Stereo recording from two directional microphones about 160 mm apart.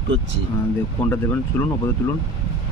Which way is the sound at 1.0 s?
15° left (ahead or behind).